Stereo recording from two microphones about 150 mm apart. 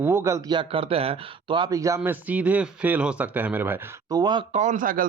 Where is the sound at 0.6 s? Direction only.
35° right (ahead or behind); by 3.8 s 10° right (ahead or behind).